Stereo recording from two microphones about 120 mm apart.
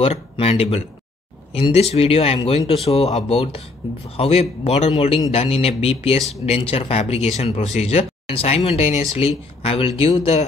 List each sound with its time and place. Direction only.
0.0 s speech: 55° left (ahead or behind)